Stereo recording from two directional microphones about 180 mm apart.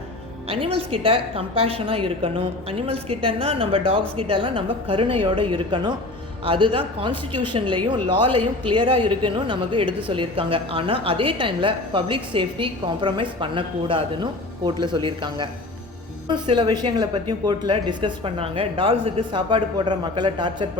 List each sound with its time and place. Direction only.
0.4 s a woman's voice: 30° right (ahead or behind)